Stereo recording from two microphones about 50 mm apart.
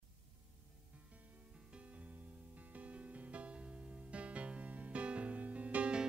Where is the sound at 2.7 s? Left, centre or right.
Right.